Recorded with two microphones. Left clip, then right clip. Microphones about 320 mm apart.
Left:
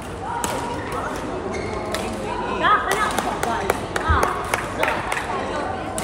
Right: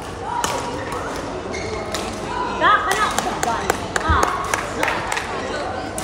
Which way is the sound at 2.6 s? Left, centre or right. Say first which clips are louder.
Right 2 dB; right.